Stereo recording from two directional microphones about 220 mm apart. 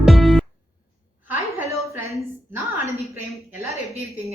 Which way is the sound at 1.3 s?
10° right (ahead or behind).